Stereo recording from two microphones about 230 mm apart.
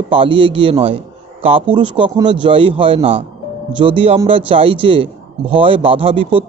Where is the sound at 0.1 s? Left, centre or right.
Right.